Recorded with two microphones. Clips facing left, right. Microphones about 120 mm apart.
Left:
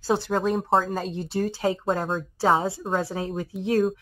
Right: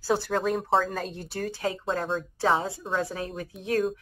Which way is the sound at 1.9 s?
45° left (ahead or behind).